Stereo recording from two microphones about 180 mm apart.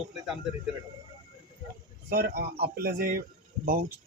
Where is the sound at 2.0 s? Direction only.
60° right (ahead or behind).